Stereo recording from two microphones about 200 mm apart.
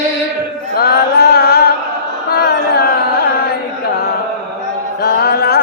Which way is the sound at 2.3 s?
50° left (ahead or behind).